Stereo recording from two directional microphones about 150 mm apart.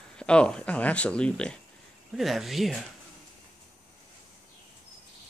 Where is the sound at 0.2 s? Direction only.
5° left (ahead or behind).